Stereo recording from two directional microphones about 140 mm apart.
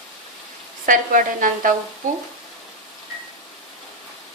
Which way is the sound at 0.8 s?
70° right (ahead or behind).